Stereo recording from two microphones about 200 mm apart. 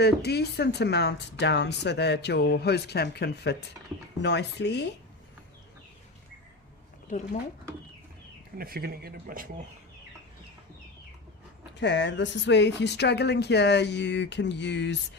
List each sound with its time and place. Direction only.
0.0 s speech: 55° left (ahead or behind)
8.5 s speech: 50° right (ahead or behind)
11.8 s speech: 60° left (ahead or behind)